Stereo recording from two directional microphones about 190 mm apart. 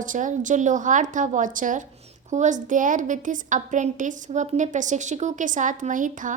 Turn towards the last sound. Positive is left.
turn(degrees=-45)  # may be behind; listen again after turning